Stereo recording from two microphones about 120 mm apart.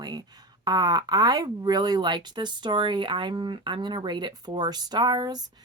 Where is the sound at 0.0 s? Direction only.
35° right (ahead or behind).